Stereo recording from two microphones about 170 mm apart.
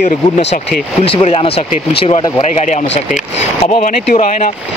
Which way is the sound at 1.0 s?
35° left (ahead or behind).